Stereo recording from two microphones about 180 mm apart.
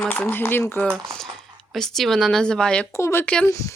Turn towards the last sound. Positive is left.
turn(degrees=10)  # may be behind; listen again after turning